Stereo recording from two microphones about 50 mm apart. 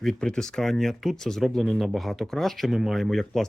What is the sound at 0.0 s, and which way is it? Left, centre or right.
Speech, centre.